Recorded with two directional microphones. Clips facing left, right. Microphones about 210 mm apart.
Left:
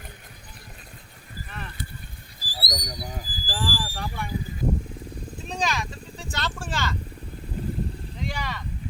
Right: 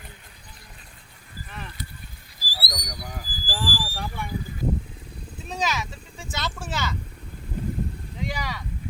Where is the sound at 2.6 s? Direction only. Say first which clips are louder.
Left 3 dB; 25° left (ahead or behind).